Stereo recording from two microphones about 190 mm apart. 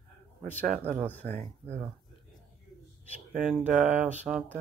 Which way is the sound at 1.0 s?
10° left (ahead or behind).